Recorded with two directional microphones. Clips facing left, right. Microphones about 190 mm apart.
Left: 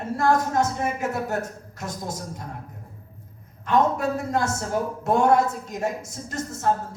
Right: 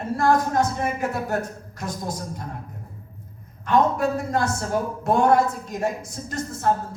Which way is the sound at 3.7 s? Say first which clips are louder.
Right 1 dB; 25° left (ahead or behind).